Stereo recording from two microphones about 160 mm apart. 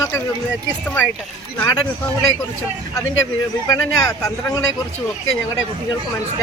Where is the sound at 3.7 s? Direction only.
20° left (ahead or behind).